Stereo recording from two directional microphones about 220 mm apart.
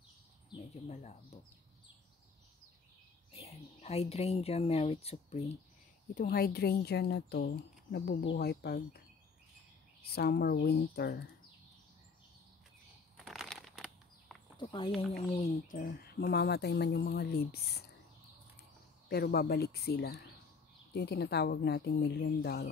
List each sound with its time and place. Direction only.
0.5 s speech: 30° left (ahead or behind)
3.3 s speech: 30° left (ahead or behind)
6.1 s speech: 45° left (ahead or behind)
10.1 s speech: 45° left (ahead or behind)
13.2 s a sound: centre (ahead or behind)
14.6 s speech: 20° left (ahead or behind)
15.8 s speech: 45° left (ahead or behind)
19.0 s speech: 45° left (ahead or behind)